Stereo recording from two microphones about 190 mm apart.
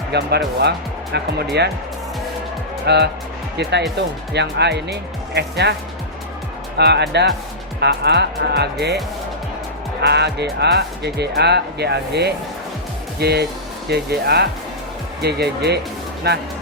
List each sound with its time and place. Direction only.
0.1 s speech: 60° right (ahead or behind)
2.8 s speech: 60° right (ahead or behind)
6.7 s speech: 60° right (ahead or behind)
10.0 s speech: 60° right (ahead or behind)